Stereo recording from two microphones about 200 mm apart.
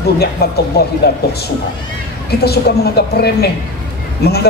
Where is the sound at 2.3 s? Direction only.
55° left (ahead or behind).